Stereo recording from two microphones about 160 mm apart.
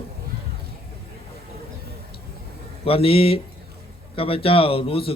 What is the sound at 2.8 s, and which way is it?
A man's voice, 35° left (ahead or behind).